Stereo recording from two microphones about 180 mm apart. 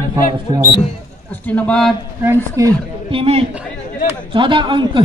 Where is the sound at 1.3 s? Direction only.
10° left (ahead or behind).